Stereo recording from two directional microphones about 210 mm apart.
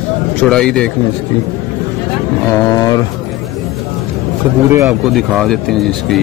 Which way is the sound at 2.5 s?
15° left (ahead or behind).